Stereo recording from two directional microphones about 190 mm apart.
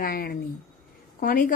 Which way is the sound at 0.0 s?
50° left (ahead or behind).